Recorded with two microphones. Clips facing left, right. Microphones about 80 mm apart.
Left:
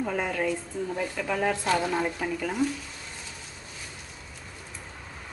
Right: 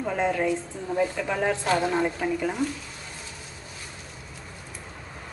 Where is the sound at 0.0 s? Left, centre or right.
Centre.